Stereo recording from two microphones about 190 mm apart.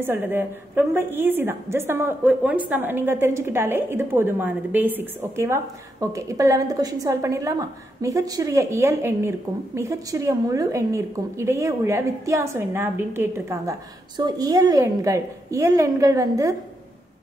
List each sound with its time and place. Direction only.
0.0 s a woman's voice: 10° right (ahead or behind)